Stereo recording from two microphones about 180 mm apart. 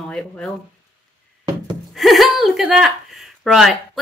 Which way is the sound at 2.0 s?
Centre (ahead or behind).